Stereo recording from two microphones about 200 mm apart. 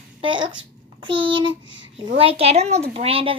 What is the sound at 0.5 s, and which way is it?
A child's voice, 25° right (ahead or behind).